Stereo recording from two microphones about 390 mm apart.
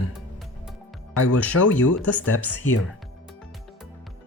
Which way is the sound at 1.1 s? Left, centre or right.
Left.